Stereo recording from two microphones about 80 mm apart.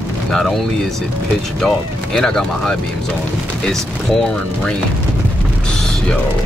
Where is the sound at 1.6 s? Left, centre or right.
Centre.